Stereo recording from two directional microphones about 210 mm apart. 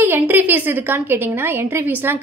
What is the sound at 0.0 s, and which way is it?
A woman's voice, 10° right (ahead or behind).